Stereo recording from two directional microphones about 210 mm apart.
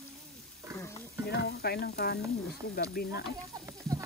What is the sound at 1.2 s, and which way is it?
Speech, 50° left (ahead or behind).